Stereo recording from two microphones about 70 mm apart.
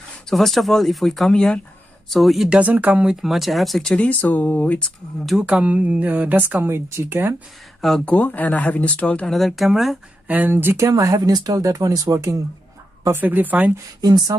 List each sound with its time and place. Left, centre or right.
0.3 s speech: centre
2.5 s speech: right
3.1 s speech: centre
3.9 s speech: centre
5.4 s speech: centre; by 7.3 s right
8.0 s speech: left; by 9.9 s centre
10.2 s speech: right
10.5 s speech: right
10.9 s speech: right
11.1 s speech: right
13.1 s speech: right
14.0 s speech: right